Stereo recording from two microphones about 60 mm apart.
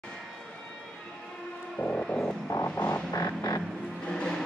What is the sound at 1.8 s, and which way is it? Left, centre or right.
Vehicle, left.